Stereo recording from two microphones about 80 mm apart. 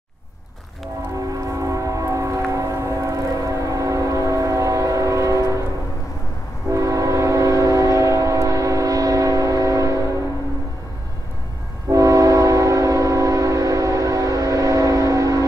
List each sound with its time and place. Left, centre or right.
1.1 s train: right
6.7 s train: right
11.9 s train: right